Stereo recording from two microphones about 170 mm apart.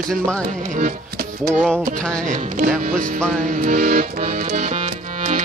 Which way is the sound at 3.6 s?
55° right (ahead or behind).